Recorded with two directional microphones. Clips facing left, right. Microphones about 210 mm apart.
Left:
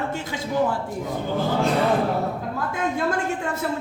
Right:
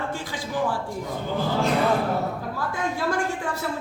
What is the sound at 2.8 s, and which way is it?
Speech, 25° left (ahead or behind).